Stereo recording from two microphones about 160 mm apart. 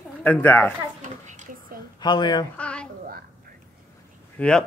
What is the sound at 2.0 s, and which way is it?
Speech, 25° left (ahead or behind).